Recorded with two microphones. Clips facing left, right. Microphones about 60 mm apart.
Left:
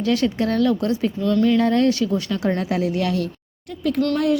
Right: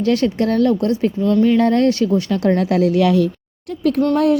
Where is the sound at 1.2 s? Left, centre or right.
Centre.